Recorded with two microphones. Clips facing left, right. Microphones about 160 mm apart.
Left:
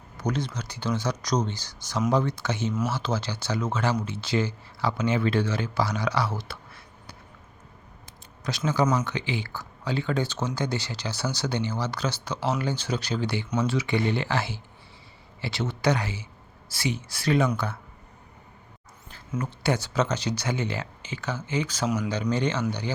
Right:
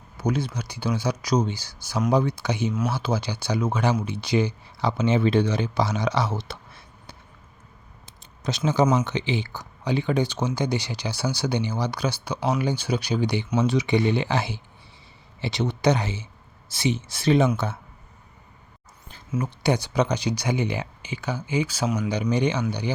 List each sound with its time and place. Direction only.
0.2 s speech: 10° right (ahead or behind)
8.0 s a sound: 25° right (ahead or behind)
9.0 s speech: 20° right (ahead or behind)
19.3 s speech: 15° right (ahead or behind)